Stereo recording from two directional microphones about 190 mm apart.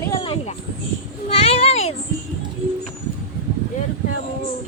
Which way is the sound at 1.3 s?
30° left (ahead or behind).